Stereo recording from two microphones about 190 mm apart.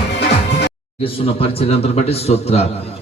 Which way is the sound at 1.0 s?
30° left (ahead or behind).